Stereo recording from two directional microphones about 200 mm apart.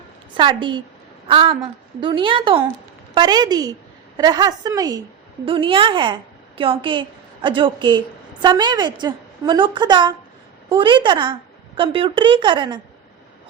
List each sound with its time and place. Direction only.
0.3 s a woman's voice: 25° right (ahead or behind)